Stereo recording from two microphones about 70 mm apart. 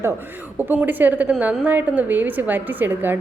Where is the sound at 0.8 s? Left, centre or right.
Right.